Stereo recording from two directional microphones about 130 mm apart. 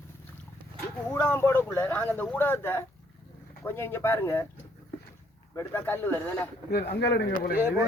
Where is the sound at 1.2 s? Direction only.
20° left (ahead or behind).